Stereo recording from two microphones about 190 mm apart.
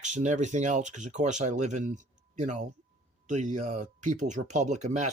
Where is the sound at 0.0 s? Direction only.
40° right (ahead or behind).